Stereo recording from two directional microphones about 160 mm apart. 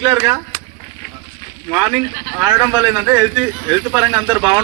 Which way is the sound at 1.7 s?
10° right (ahead or behind).